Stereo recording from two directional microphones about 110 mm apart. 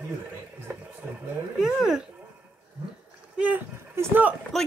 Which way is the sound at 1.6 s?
5° right (ahead or behind).